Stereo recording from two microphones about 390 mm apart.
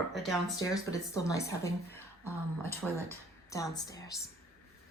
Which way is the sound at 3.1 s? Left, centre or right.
Centre.